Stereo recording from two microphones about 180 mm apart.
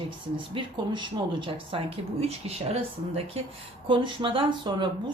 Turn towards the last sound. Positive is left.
turn(degrees=-25)  # may be behind; listen again after turning